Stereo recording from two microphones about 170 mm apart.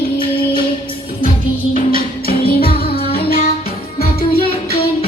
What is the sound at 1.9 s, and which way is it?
Music, 60° left (ahead or behind).